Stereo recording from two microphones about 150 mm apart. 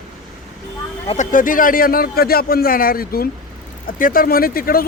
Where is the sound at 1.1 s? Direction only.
60° left (ahead or behind); by 3.2 s 80° left.